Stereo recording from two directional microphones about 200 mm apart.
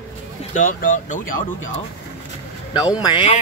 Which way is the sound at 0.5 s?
40° left (ahead or behind).